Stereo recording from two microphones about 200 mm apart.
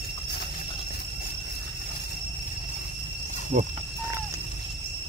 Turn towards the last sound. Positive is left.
turn(degrees=-50)  # may be behind; listen again after turning